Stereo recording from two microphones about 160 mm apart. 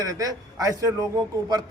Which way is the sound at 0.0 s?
20° right (ahead or behind).